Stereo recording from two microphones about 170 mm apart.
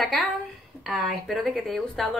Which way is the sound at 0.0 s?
Centre (ahead or behind).